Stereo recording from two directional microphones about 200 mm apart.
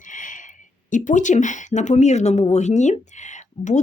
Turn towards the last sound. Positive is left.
turn(degrees=35)  # may be behind; listen again after turning